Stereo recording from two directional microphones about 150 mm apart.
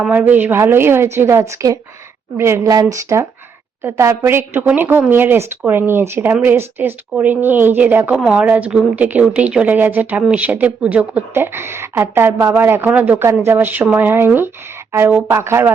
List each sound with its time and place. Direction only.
0.0 s speech: 10° right (ahead or behind)